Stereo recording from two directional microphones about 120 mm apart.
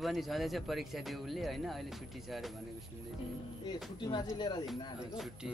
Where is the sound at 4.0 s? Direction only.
35° left (ahead or behind).